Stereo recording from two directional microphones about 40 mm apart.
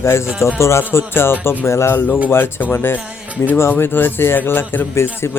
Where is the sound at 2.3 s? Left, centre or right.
Left.